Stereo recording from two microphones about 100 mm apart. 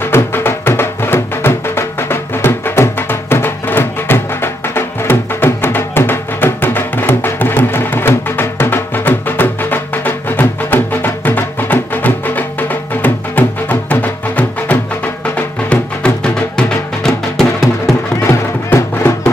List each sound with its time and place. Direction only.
0.0 s music: 25° left (ahead or behind)
16.5 s music: 5° left (ahead or behind)
18.2 s music: 25° left (ahead or behind)